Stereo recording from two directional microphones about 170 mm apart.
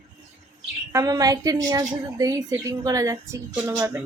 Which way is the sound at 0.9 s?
20° right (ahead or behind).